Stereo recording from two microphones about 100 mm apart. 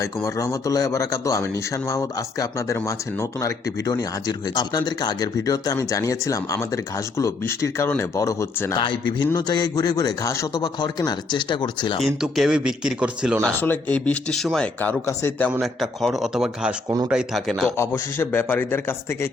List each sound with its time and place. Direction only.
0.0 s speech: 35° left (ahead or behind)
8.7 s speech: 50° left (ahead or behind); by 10.6 s 30° left (ahead or behind)
10.6 s speech: 45° left (ahead or behind)
12.0 s speech: 5° right (ahead or behind)
13.6 s speech: 15° left (ahead or behind)
14.8 s speech: 20° left (ahead or behind)
15.6 s speech: centre (ahead or behind)
17.7 s speech: 25° left (ahead or behind)